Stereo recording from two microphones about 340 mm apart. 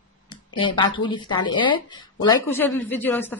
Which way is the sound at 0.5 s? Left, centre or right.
Centre.